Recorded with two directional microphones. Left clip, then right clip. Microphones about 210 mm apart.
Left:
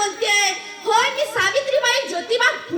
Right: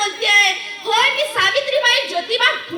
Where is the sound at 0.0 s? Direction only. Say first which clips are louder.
Right 4 dB; 55° left (ahead or behind).